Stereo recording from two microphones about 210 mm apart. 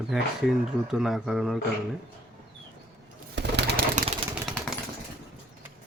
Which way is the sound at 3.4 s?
55° right (ahead or behind).